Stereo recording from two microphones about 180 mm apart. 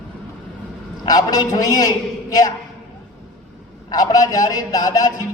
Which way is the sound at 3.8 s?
20° left (ahead or behind).